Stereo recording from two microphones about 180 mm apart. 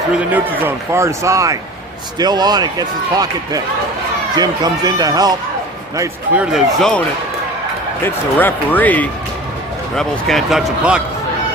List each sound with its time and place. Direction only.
0.3 s speech: 10° right (ahead or behind)
6.0 s speech: 5° right (ahead or behind)
8.0 s speech: 10° left (ahead or behind)